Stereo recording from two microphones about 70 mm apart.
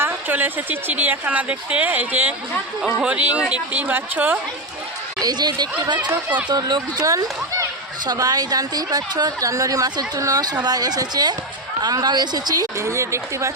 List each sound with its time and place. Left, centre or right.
0.0 s speech: right
5.2 s a woman's voice: right
7.1 s a child's voice: right
8.0 s a woman's voice: right
11.8 s speech: right
12.8 s speech: right